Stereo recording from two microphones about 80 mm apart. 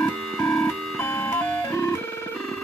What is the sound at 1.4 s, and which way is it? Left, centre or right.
Music, left.